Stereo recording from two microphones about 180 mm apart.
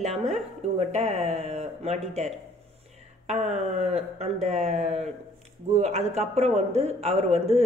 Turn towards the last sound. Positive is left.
turn(degrees=-35)  # may be behind; listen again after turning